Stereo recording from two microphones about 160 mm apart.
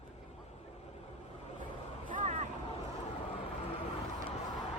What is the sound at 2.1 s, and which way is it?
Vehicle, 50° right (ahead or behind).